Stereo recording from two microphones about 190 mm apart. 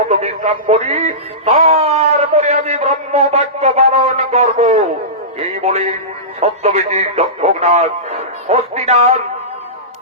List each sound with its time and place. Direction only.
0.1 s music: 35° right (ahead or behind)
5.4 s speech: 35° right (ahead or behind)